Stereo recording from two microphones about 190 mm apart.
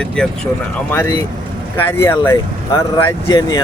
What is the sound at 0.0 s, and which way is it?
Speech, 5° left (ahead or behind).